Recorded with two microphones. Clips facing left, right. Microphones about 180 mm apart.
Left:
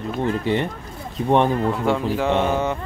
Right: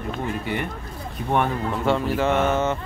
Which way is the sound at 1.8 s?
10° left (ahead or behind).